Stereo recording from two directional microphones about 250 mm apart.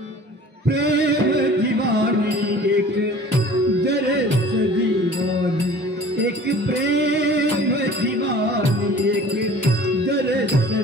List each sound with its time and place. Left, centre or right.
0.7 s music: right
3.8 s music: right
6.2 s music: right